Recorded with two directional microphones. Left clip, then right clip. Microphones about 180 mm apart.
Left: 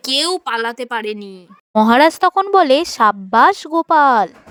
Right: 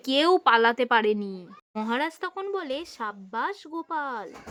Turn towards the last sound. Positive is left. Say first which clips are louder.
# left 19 dB
turn(degrees=55)  # may be behind; listen again after turning